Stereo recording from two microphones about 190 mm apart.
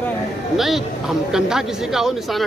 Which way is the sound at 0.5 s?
Centre (ahead or behind).